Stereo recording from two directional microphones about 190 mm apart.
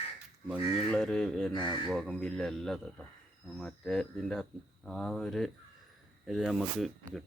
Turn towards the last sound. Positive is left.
turn(degrees=0)  # may be behind; listen again after turning